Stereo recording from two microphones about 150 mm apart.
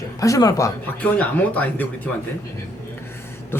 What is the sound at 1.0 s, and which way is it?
Speech, 10° left (ahead or behind).